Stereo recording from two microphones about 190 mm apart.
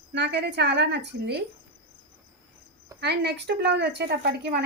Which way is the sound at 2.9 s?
60° right (ahead or behind).